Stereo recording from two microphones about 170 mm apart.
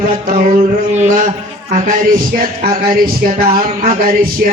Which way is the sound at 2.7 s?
60° right (ahead or behind).